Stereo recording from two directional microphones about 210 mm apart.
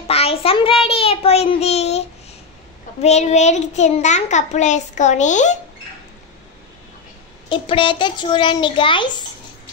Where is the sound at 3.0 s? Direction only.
30° left (ahead or behind).